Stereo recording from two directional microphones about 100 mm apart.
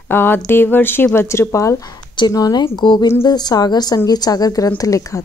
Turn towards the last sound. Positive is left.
turn(degrees=35)  # may be behind; listen again after turning